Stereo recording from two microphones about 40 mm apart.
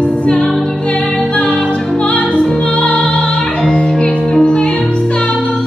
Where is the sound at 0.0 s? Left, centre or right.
Left.